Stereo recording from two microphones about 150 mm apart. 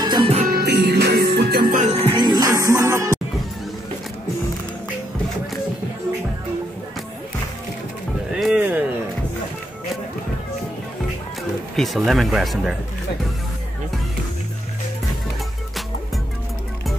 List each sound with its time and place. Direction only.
0.0 s music: 30° right (ahead or behind)
0.5 s music: 90° right
1.8 s music: 40° right (ahead or behind); by 3.2 s 20° right (ahead or behind)
8.3 s music: 5° right (ahead or behind)
11.7 s speech: centre (ahead or behind)